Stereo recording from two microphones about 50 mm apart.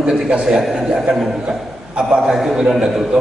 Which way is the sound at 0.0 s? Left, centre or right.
Centre.